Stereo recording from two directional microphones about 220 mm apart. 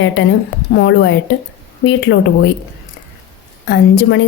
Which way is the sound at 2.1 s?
55° left (ahead or behind).